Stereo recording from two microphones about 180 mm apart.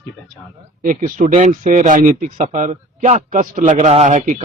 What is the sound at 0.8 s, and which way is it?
Speech, 45° right (ahead or behind).